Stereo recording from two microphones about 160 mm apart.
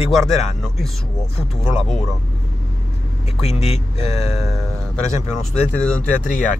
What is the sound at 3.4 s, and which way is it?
Speech, 40° left (ahead or behind).